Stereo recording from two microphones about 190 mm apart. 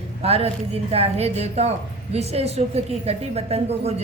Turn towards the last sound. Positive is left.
turn(degrees=-35)  # may be behind; listen again after turning